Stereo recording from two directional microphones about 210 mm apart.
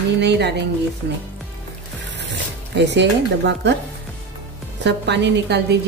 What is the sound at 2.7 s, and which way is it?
A woman's voice, 55° right (ahead or behind).